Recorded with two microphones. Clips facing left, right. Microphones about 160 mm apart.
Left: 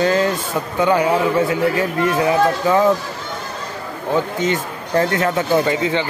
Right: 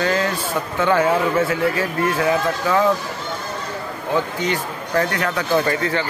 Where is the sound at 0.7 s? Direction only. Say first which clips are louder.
Left 2 dB; 15° left (ahead or behind).